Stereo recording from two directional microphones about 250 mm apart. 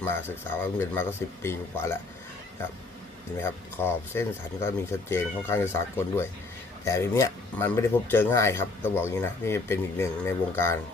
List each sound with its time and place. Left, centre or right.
0.0 s speech: centre
3.4 s speech: centre